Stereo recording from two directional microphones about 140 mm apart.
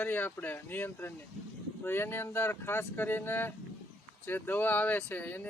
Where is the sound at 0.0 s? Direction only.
10° left (ahead or behind).